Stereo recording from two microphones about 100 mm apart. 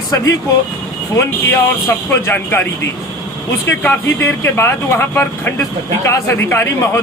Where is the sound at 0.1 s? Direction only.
30° left (ahead or behind).